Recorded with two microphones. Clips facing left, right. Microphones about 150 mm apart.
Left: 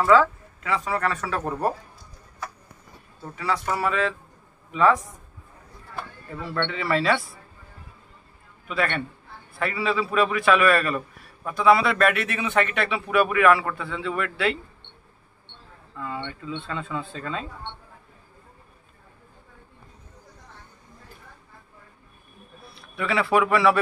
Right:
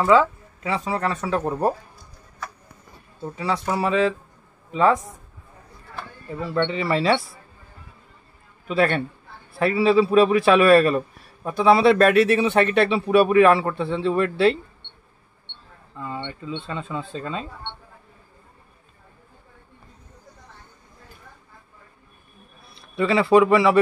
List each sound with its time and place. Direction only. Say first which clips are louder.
0.7 s speech: right 1 dB; 25° right (ahead or behind)
3.2 s a man's voice: right 2 dB; 25° right (ahead or behind)
6.5 s speech: right 3 dB; 25° right (ahead or behind)
8.6 s a man's voice: right 6 dB; 35° right (ahead or behind)
16.0 s speech: right 1 dB; 25° right (ahead or behind)
16.6 s speech: right 1 dB; 20° right (ahead or behind)
22.9 s speech: right 6 dB; 25° right (ahead or behind)